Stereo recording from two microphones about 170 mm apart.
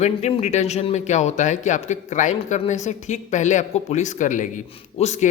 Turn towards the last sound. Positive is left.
turn(degrees=40)  # may be behind; listen again after turning